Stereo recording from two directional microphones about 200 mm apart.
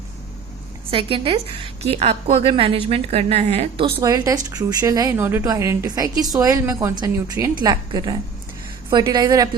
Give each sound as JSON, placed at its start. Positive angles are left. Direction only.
{"t": 0.9, "sound": "a woman's voice", "side_deg": -25}